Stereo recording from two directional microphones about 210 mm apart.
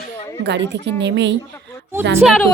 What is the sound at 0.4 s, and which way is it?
Speech, 55° right (ahead or behind).